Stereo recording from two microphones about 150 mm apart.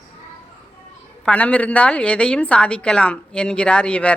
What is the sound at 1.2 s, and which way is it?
A woman's voice, 10° left (ahead or behind).